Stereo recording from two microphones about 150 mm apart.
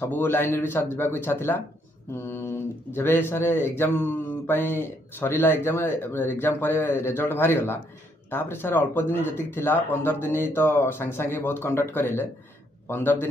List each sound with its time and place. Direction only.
0.0 s speech: 15° left (ahead or behind)